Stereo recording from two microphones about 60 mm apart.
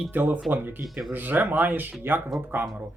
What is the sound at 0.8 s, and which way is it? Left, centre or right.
Speech, centre.